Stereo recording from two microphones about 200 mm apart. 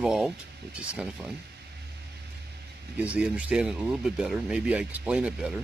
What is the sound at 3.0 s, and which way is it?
Speech, 5° right (ahead or behind).